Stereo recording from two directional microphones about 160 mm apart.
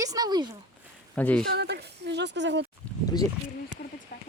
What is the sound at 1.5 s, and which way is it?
Speech, 90° right.